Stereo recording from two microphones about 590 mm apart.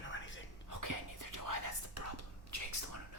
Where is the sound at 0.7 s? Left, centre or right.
Right.